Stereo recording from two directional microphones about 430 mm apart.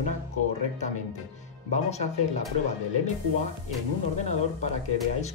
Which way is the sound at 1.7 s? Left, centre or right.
Centre.